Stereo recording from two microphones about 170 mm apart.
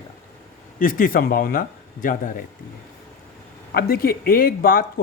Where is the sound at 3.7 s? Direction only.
65° left (ahead or behind).